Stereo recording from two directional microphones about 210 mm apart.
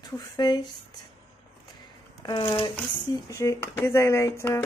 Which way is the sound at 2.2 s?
20° left (ahead or behind).